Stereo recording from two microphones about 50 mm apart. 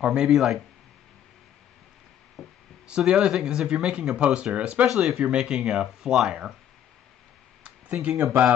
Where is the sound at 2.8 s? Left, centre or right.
Centre.